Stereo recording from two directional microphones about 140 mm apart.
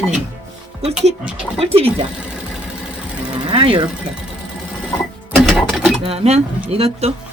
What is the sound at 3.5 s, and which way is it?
Speech, 40° right (ahead or behind).